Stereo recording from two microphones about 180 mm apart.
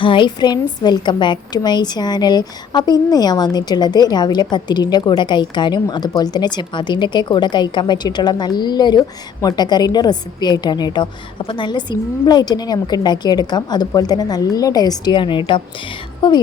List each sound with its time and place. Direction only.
0.0 s a woman's voice: 25° left (ahead or behind)